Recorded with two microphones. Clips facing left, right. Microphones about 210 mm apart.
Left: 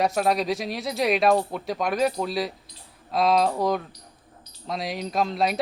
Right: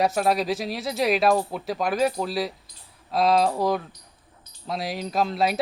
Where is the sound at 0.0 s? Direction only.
Centre (ahead or behind).